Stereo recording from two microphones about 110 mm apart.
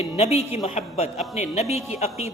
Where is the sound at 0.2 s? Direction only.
70° left (ahead or behind); by 1.1 s 90° left.